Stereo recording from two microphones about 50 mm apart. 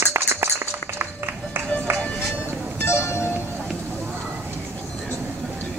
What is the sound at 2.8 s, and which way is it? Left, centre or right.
Music, left.